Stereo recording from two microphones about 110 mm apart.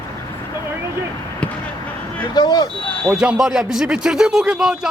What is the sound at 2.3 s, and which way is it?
Speech, 40° left (ahead or behind).